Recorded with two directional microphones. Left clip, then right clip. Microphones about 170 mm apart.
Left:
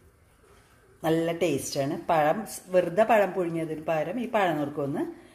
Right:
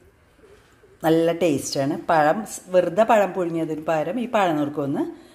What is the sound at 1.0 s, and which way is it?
A woman's voice, 20° right (ahead or behind).